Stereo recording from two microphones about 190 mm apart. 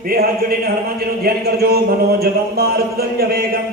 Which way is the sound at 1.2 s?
55° right (ahead or behind).